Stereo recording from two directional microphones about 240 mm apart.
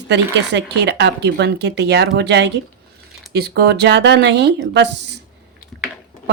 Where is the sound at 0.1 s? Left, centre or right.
Right.